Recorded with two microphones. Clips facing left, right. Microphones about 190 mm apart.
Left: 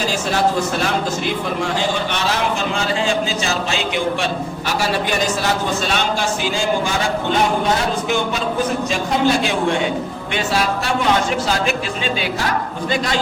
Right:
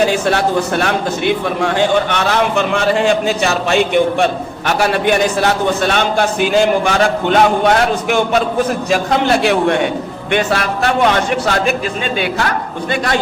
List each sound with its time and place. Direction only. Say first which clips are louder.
0.0 s a man's voice: right 5 dB; 60° right (ahead or behind)